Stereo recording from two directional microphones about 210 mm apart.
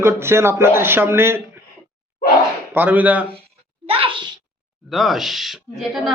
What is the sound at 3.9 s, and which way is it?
Speech, 25° right (ahead or behind).